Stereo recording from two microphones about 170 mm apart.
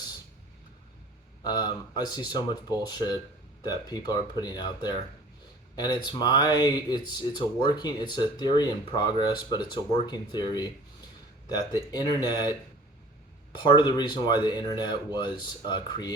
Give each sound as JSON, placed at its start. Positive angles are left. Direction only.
{"t": 1.5, "sound": "speech", "side_deg": 25}
{"t": 13.6, "sound": "speech", "side_deg": 25}